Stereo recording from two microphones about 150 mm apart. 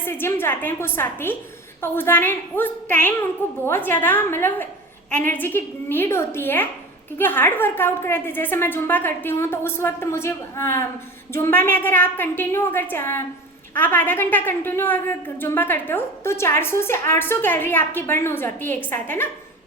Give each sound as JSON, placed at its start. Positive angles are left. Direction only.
{"t": 0.0, "sound": "a woman's voice", "side_deg": 15}